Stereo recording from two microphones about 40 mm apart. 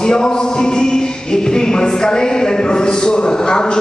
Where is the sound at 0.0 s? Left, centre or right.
Centre.